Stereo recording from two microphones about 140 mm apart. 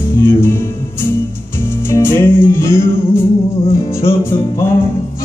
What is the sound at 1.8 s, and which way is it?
Music, 15° left (ahead or behind).